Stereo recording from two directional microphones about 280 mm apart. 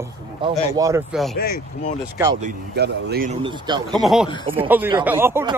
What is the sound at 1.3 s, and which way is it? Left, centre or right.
Speech, left.